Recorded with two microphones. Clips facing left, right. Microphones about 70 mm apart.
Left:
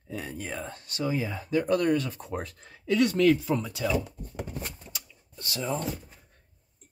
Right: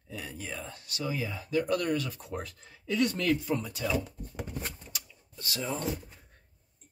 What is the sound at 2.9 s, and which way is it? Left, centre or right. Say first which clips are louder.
Speech: left 4 dB; left.